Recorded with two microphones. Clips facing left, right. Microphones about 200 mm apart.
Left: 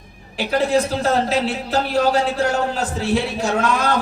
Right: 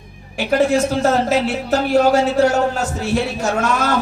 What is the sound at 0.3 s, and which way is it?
A man's voice, 45° right (ahead or behind).